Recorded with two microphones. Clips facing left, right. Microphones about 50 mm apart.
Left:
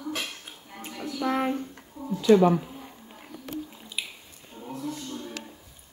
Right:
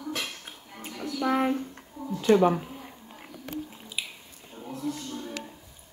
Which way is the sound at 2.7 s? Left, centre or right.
Centre.